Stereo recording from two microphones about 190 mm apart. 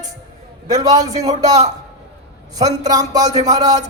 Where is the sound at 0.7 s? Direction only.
20° right (ahead or behind).